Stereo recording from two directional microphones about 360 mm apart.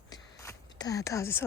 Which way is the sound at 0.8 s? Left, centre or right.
Centre.